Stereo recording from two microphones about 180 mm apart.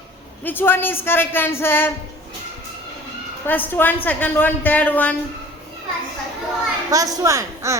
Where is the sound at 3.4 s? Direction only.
10° left (ahead or behind).